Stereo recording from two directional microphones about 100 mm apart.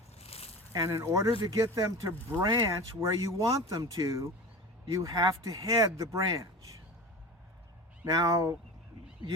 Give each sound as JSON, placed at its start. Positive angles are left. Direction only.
{"t": 0.2, "sound": "a sound", "side_deg": 90}
{"t": 0.7, "sound": "speech", "side_deg": -35}
{"t": 8.0, "sound": "speech", "side_deg": -35}